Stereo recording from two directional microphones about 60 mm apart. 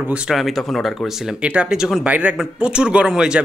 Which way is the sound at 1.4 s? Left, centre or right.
Centre.